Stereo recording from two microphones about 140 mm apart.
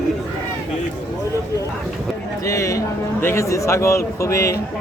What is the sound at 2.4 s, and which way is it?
A man's voice, 25° left (ahead or behind).